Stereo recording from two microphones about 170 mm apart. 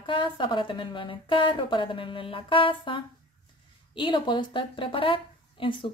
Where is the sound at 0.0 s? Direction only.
30° left (ahead or behind).